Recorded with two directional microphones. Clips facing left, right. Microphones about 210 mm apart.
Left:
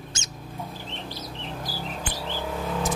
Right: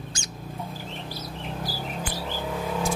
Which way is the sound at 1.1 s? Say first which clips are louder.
Right 1 dB; 10° right (ahead or behind).